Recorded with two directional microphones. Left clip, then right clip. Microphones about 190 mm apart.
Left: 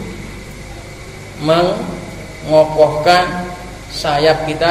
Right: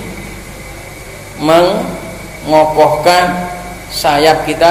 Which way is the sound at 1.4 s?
10° right (ahead or behind).